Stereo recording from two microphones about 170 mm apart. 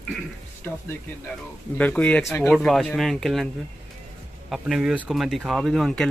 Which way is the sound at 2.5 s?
Centre (ahead or behind).